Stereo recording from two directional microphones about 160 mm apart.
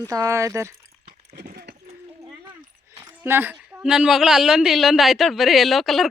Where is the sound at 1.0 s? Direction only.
80° right.